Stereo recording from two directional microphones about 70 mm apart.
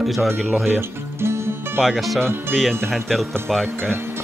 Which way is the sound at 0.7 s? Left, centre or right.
Right.